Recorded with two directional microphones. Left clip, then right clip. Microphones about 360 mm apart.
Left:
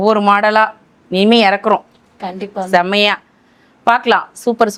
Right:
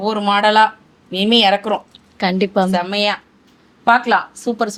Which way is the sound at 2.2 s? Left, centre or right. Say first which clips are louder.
Right 6 dB; right.